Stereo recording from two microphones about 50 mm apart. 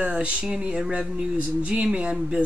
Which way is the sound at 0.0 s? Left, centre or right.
Right.